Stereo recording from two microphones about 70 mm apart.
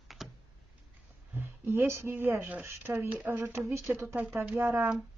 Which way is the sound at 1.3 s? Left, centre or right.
Right.